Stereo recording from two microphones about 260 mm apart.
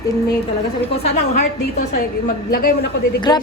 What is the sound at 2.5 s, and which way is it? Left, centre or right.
Speech, left.